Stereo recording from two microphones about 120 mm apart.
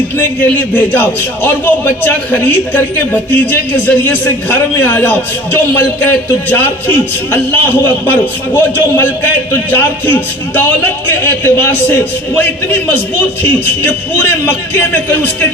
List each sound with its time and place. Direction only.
0.2 s a man's voice: 15° left (ahead or behind)